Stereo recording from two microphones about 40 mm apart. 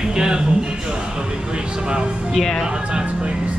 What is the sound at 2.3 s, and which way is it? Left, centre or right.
Music, centre.